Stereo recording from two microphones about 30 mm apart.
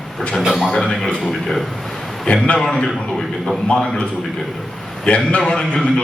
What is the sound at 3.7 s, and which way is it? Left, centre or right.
Speech, left.